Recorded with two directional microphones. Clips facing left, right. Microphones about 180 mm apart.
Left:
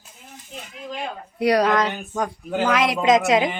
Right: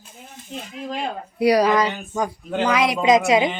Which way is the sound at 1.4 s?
Centre (ahead or behind).